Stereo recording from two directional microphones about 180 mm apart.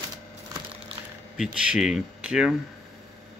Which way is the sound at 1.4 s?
5° right (ahead or behind).